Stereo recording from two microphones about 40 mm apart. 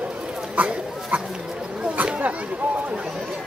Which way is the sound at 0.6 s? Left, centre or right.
Right.